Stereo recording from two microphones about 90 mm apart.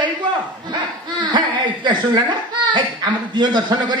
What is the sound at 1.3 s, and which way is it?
Chuckle, 60° right (ahead or behind).